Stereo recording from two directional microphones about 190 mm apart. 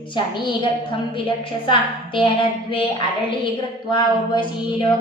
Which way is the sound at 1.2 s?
25° left (ahead or behind).